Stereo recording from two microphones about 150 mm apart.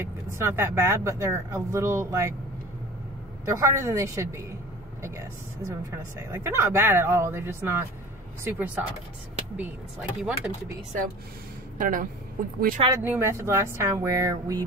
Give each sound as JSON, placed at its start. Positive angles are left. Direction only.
{"t": 0.0, "sound": "speech", "side_deg": -15}
{"t": 3.4, "sound": "speech", "side_deg": -20}
{"t": 5.9, "sound": "speech", "side_deg": -15}
{"t": 11.8, "sound": "a woman's voice", "side_deg": -65}
{"t": 12.9, "sound": "speech", "side_deg": -15}